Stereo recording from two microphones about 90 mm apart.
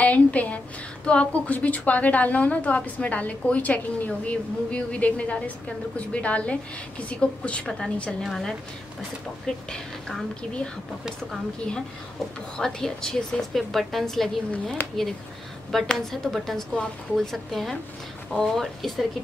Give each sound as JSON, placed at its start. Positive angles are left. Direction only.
{"t": 0.0, "sound": "a woman's voice", "side_deg": 15}
{"t": 12.5, "sound": "a woman's voice", "side_deg": 5}
{"t": 14.8, "sound": "speech", "side_deg": 20}
{"t": 15.7, "sound": "a woman's voice", "side_deg": 5}